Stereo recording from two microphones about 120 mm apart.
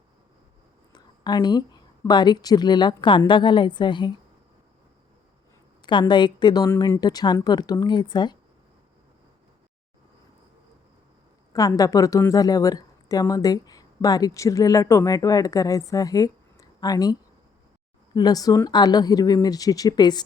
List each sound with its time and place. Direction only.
0.9 s a woman's voice: 35° left (ahead or behind)
5.8 s speech: 40° left (ahead or behind)
6.7 s speech: 25° left (ahead or behind)
11.5 s a woman's voice: 30° left (ahead or behind)